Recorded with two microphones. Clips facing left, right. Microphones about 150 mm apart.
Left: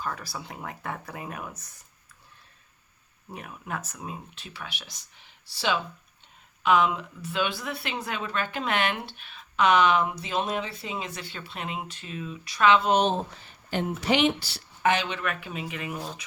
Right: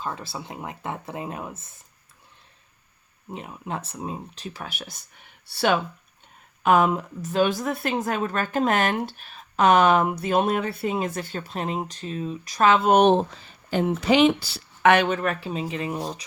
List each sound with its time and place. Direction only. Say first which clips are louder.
0.0 s speech: right 2 dB; 25° right (ahead or behind)
3.2 s speech: right 4 dB; 25° right (ahead or behind); by 13.4 s 70° right (ahead or behind)
14.8 s speech: right 7 dB; 65° right (ahead or behind)
15.0 s speech: right 7 dB; 40° right (ahead or behind)